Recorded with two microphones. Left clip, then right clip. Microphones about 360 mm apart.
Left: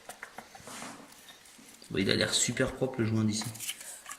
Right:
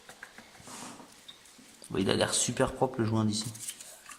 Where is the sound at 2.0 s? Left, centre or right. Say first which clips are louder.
Even; centre.